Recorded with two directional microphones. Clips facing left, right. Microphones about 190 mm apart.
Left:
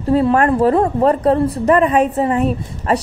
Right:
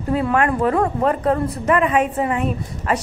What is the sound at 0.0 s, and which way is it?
A woman's voice, 35° left (ahead or behind).